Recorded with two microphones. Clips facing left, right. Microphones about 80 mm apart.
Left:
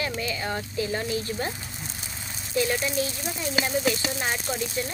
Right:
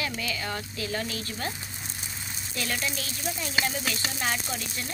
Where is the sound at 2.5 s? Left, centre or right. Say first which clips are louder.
Left 7 dB; centre.